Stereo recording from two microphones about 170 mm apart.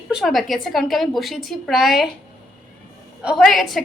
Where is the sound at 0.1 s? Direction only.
Centre (ahead or behind).